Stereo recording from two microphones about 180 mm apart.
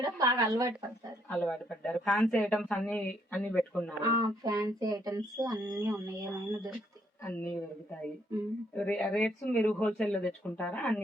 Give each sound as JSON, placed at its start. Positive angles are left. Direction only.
{"t": 0.0, "sound": "a sound", "side_deg": -20}
{"t": 1.3, "sound": "speech", "side_deg": 5}
{"t": 4.0, "sound": "speech", "side_deg": -20}
{"t": 7.3, "sound": "speech", "side_deg": 10}
{"t": 8.7, "sound": "speech", "side_deg": 5}